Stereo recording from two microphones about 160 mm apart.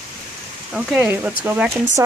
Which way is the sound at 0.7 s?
10° right (ahead or behind).